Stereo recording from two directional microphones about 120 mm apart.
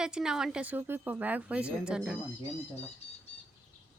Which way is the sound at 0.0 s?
5° right (ahead or behind).